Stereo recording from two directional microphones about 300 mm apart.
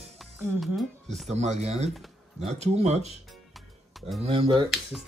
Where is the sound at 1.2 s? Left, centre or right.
Right.